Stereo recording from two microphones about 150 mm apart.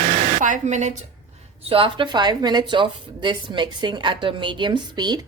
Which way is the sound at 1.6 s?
35° right (ahead or behind).